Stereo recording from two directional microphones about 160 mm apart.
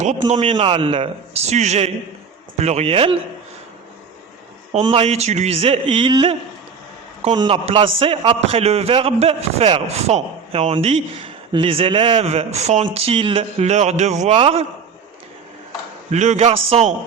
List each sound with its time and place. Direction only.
0.0 s a man's voice: 45° right (ahead or behind)
0.5 s a man's voice: 30° right (ahead or behind)
4.8 s a man's voice: 35° right (ahead or behind)
7.3 s a man's voice: 35° right (ahead or behind)
16.1 s a man's voice: 45° right (ahead or behind)